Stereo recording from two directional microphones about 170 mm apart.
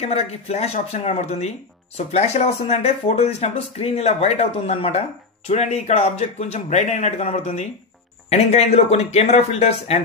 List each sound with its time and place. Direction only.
0.0 s speech: 40° left (ahead or behind)